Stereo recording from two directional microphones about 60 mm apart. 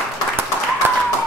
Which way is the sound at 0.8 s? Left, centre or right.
Right.